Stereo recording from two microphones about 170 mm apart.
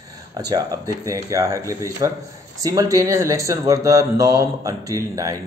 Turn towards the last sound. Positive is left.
turn(degrees=-20)  # may be behind; listen again after turning